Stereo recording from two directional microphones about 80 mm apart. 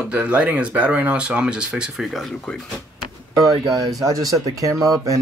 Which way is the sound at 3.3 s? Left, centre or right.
Right.